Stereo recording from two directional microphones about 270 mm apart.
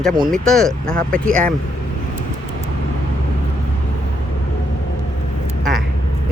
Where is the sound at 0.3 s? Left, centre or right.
Centre.